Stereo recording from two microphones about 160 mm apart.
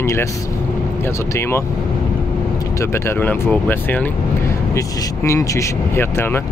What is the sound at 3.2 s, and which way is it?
Speech, 10° left (ahead or behind).